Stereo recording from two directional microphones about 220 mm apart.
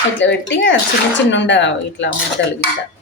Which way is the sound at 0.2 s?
55° left (ahead or behind).